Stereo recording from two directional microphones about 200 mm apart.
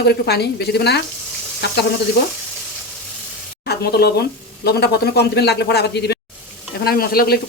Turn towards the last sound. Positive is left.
turn(degrees=50)  # may be behind; listen again after turning